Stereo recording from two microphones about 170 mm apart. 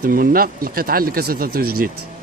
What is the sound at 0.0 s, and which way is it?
Speech, 60° right (ahead or behind).